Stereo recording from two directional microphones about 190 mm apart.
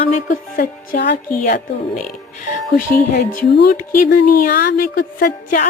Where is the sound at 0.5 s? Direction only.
55° left (ahead or behind).